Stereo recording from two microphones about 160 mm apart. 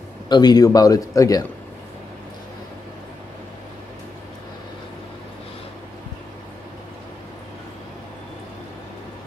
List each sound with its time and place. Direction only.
0.3 s a man's voice: 25° left (ahead or behind)